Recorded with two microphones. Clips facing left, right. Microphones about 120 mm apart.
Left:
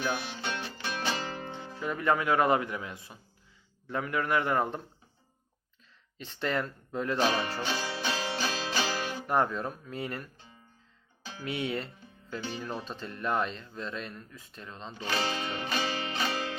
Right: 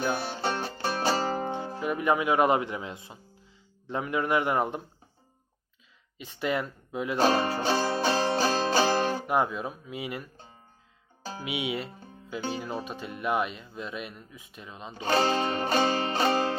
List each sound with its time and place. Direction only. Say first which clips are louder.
0.0 s music: right 4 dB; 40° right (ahead or behind)
1.8 s speech: right 2 dB; 15° right (ahead or behind)
6.1 s speech: right 2 dB; 10° right (ahead or behind)
7.2 s speech: right 6 dB; 35° right (ahead or behind)
7.6 s music: right 7 dB; 40° right (ahead or behind)
9.2 s speech: right 1 dB; 10° right (ahead or behind)
11.2 s music: right 6 dB; 40° right (ahead or behind)
11.4 s speech: right 1 dB; 10° right (ahead or behind)
15.0 s music: right 8 dB; 40° right (ahead or behind)